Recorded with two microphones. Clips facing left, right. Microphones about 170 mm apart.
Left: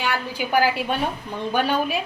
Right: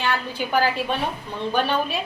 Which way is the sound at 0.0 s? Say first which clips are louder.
Even; 10° left (ahead or behind).